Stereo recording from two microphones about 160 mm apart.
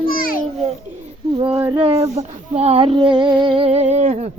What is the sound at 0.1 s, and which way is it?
Babbling, 60° left (ahead or behind).